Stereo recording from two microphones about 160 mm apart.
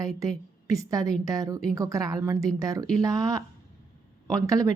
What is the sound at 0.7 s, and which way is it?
A woman's voice, 20° right (ahead or behind).